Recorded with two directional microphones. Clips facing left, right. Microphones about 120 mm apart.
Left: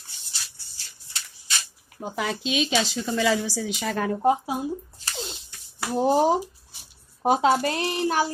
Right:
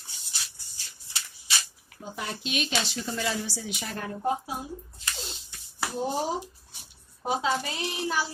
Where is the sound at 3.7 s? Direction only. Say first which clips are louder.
Left 9 dB; 90° left.